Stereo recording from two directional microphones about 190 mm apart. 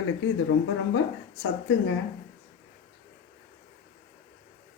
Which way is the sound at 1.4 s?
90° left.